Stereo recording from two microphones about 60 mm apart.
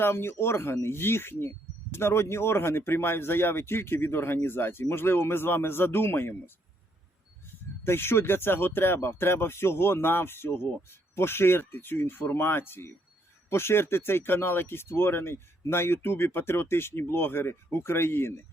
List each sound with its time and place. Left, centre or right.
0.0 s speech: left
7.9 s speech: left